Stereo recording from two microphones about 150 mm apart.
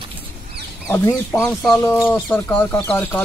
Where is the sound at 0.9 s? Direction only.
15° left (ahead or behind).